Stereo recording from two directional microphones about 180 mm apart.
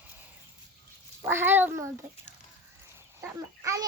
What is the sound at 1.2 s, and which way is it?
Speech, 10° right (ahead or behind).